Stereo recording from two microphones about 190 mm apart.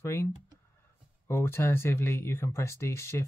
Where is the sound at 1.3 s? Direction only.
15° left (ahead or behind).